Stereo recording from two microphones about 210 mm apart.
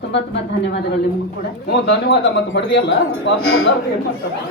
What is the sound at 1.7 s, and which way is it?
Speech, 50° left (ahead or behind).